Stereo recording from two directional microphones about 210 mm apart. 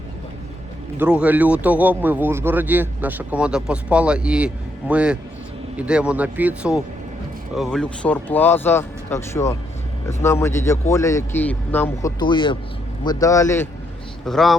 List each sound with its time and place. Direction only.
0.9 s a man's voice: 5° right (ahead or behind); by 12.1 s 10° left (ahead or behind)
12.2 s a man's voice: 20° left (ahead or behind)
14.3 s speech: centre (ahead or behind)